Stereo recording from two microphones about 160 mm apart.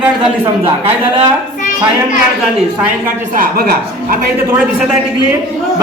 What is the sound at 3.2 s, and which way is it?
Speech, 60° right (ahead or behind).